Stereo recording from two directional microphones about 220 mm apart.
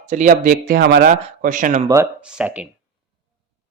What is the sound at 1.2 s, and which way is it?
Speech, 35° right (ahead or behind).